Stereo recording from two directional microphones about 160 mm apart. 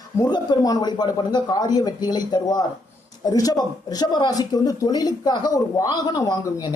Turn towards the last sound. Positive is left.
turn(degrees=25)  # may be behind; listen again after turning